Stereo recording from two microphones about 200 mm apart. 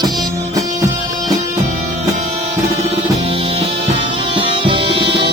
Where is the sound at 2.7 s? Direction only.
30° right (ahead or behind).